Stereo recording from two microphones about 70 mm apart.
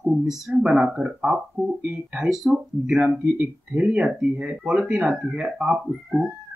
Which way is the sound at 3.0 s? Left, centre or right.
Centre.